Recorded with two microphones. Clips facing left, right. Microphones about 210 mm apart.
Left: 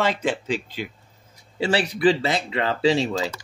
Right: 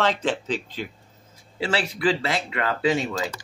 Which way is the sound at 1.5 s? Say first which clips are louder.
Left 3 dB; 30° left (ahead or behind).